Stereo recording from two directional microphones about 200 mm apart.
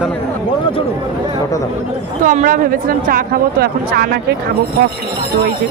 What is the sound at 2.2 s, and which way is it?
Speech, 40° right (ahead or behind).